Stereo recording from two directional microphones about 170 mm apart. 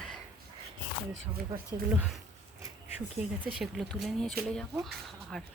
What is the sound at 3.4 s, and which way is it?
A woman's voice, 5° right (ahead or behind).